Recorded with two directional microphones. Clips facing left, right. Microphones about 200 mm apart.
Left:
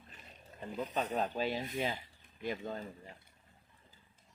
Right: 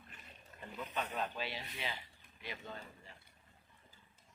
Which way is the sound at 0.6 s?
40° left (ahead or behind).